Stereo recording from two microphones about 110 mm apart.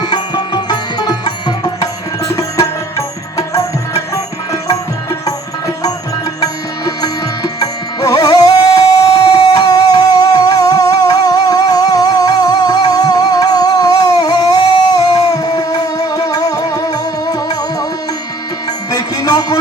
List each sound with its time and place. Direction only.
0.0 s music: 40° left (ahead or behind)
3.3 s music: 30° left (ahead or behind)
5.2 s music: 35° left (ahead or behind)
18.9 s music: 35° left (ahead or behind)